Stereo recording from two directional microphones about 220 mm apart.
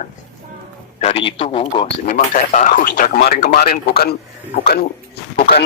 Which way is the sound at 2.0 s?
35° left (ahead or behind).